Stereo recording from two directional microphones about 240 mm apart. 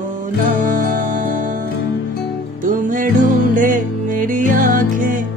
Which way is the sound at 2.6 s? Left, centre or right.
Right.